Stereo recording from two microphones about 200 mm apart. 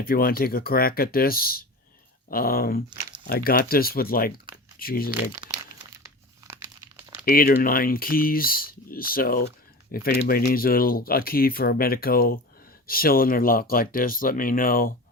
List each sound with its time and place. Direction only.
0.0 s speech: 45° left (ahead or behind)
5.5 s crumpling: 15° right (ahead or behind)
7.3 s speech: 50° left (ahead or behind)